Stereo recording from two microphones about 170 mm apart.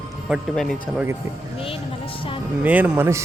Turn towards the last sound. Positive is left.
turn(degrees=-15)  # may be behind; listen again after turning